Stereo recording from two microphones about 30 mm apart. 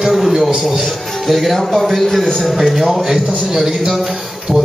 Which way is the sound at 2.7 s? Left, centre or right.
Centre.